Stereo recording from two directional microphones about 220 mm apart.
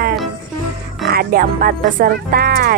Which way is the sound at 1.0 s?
45° right (ahead or behind).